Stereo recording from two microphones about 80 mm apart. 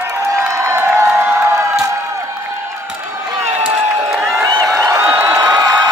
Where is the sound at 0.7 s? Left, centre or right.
Right.